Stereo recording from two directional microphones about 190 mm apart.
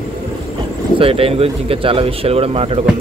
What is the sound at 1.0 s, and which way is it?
Speech, 30° right (ahead or behind).